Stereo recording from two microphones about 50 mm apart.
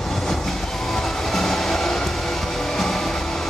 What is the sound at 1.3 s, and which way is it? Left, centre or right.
Train, centre.